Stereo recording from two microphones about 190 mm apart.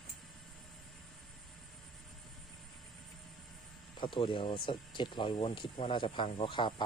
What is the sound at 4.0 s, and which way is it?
Speech, 25° left (ahead or behind).